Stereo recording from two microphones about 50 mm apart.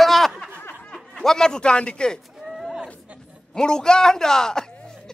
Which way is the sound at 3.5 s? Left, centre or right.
Centre.